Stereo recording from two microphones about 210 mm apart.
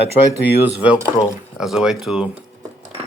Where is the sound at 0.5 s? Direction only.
10° right (ahead or behind).